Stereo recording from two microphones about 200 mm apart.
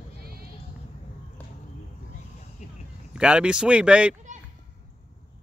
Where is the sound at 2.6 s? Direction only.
35° left (ahead or behind).